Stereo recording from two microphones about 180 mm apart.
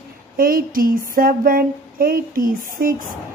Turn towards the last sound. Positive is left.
turn(degrees=-50)  # may be behind; listen again after turning